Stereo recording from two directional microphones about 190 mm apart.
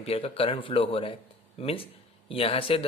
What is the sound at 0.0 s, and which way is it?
Speech, 30° left (ahead or behind).